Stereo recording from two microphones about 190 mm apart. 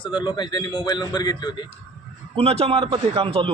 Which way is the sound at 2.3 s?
30° right (ahead or behind).